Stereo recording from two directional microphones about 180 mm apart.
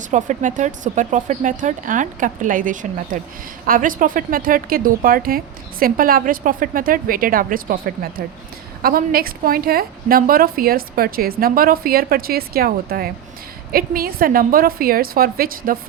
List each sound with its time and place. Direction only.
0.1 s a woman's voice: 45° right (ahead or behind)